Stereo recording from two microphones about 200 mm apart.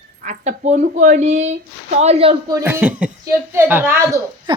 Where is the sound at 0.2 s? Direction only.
35° right (ahead or behind).